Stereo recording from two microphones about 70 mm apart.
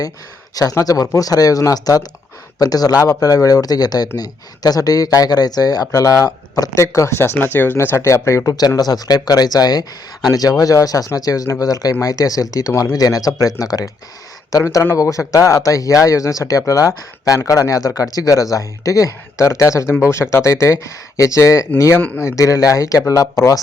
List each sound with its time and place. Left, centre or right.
0.5 s speech: left
7.2 s speech: left
8.5 s speech: left